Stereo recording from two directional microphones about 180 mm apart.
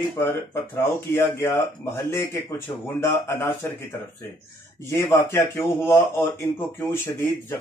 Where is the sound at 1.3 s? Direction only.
15° left (ahead or behind).